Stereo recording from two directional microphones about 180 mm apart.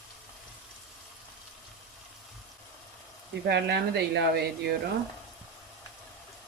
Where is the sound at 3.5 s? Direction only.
70° right (ahead or behind).